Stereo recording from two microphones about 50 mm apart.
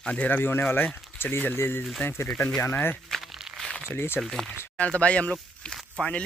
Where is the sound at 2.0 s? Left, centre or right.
Left.